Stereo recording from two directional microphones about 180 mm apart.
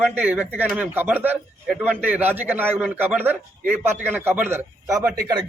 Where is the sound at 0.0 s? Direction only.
10° right (ahead or behind).